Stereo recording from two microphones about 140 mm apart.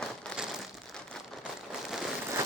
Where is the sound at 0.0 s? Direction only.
5° left (ahead or behind).